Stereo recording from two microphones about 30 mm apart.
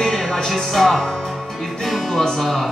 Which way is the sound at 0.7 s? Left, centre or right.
Centre.